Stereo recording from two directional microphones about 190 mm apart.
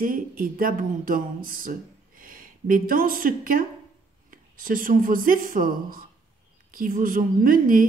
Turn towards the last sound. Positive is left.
turn(degrees=-45)  # may be behind; listen again after turning